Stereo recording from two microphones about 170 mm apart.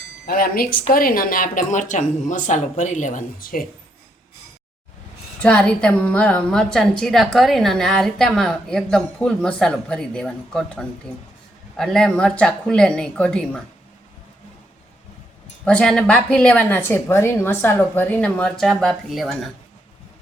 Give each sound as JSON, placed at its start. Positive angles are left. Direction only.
{"t": 0.3, "sound": "speech", "side_deg": 60}
{"t": 5.4, "sound": "a woman's voice", "side_deg": 5}
{"t": 15.6, "sound": "a woman's voice", "side_deg": 5}